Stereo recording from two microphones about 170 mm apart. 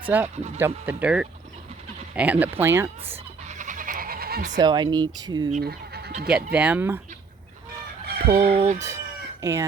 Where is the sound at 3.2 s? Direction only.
45° right (ahead or behind); by 4.4 s 60° right (ahead or behind).